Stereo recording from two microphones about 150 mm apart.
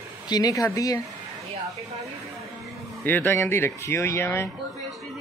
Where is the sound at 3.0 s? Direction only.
15° left (ahead or behind).